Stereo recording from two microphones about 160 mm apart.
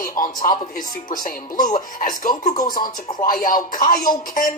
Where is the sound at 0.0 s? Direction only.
60° left (ahead or behind).